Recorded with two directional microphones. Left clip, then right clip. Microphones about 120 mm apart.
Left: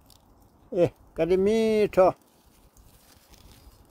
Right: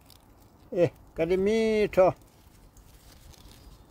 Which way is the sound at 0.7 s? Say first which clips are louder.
Left 2 dB; 55° left (ahead or behind).